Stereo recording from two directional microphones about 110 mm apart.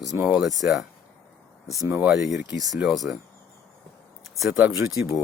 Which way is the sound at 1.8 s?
25° right (ahead or behind).